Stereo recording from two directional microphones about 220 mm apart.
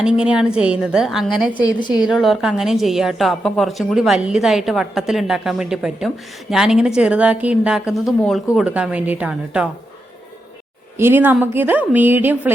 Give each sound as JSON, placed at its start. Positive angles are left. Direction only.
{"t": 0.0, "sound": "a woman's voice", "side_deg": -5}
{"t": 10.9, "sound": "a woman's voice", "side_deg": -10}